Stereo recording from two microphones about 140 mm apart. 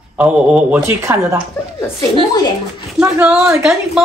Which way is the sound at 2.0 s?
30° left (ahead or behind).